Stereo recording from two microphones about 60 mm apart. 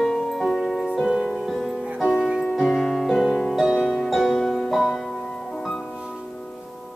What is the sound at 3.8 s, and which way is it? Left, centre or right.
Music, centre.